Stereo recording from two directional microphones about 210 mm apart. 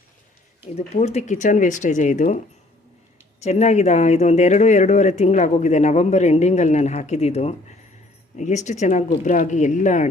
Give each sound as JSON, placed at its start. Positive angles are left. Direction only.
{"t": 0.8, "sound": "speech", "side_deg": 30}
{"t": 3.4, "sound": "speech", "side_deg": 30}